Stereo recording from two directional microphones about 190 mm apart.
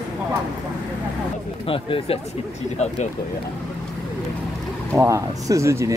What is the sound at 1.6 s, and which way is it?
Speech, 30° left (ahead or behind).